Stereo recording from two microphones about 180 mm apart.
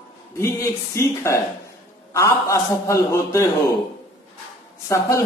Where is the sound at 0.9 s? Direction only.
15° left (ahead or behind).